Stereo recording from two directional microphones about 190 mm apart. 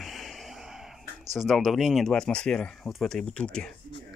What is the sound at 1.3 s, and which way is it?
Speech, centre (ahead or behind).